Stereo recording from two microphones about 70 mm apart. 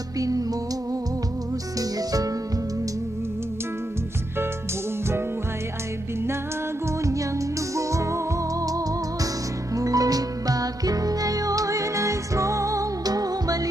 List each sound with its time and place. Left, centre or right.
0.2 s music: right
1.8 s music: right
7.0 s music: right
9.7 s music: right